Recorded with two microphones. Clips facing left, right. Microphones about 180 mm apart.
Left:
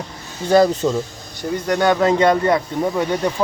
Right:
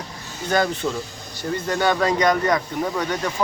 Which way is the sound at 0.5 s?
35° left (ahead or behind).